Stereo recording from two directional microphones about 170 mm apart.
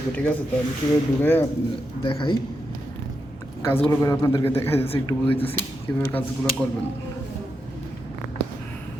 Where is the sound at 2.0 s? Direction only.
30° left (ahead or behind).